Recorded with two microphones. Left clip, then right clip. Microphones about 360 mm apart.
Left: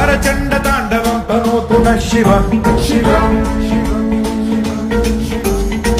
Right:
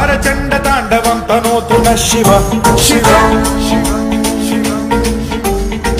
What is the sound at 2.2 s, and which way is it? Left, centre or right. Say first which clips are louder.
Music: right 3 dB; right.